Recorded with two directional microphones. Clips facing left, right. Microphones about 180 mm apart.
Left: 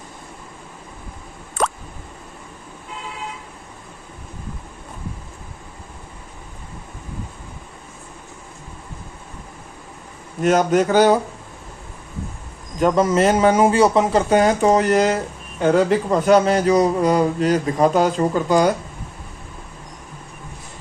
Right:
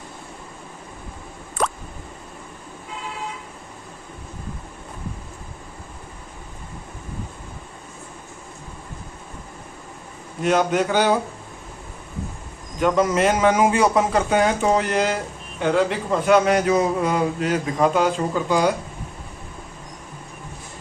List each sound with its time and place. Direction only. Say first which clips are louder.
10.4 s a man's voice: left 3 dB; 40° left (ahead or behind)
12.8 s a man's voice: left 2 dB; 30° left (ahead or behind)